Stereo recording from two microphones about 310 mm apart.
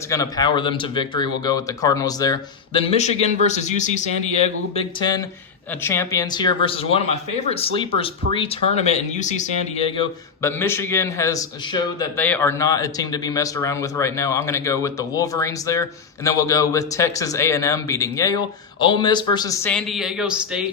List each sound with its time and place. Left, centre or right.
0.1 s speech: centre